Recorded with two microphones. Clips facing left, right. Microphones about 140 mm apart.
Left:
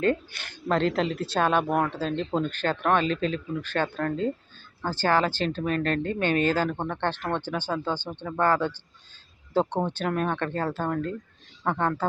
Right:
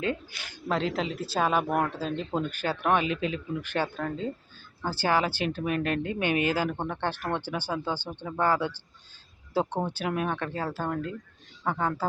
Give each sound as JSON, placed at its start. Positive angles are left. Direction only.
{"t": 0.0, "sound": "speech", "side_deg": 55}
{"t": 0.7, "sound": "speech", "side_deg": -5}